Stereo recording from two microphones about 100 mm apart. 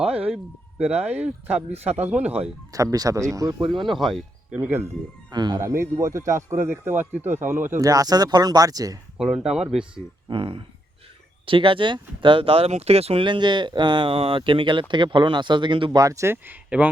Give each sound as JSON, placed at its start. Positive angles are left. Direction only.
{"t": 0.0, "sound": "speech", "side_deg": -10}
{"t": 2.7, "sound": "speech", "side_deg": -35}
{"t": 3.7, "sound": "speech", "side_deg": 0}
{"t": 4.5, "sound": "speech", "side_deg": -15}
{"t": 5.3, "sound": "speech", "side_deg": -45}
{"t": 5.5, "sound": "a man's voice", "side_deg": -30}
{"t": 7.9, "sound": "speech", "side_deg": -40}
{"t": 9.1, "sound": "speech", "side_deg": -5}
{"t": 10.2, "sound": "speech", "side_deg": -55}
{"t": 13.2, "sound": "speech", "side_deg": -50}
{"t": 16.0, "sound": "a man's voice", "side_deg": -35}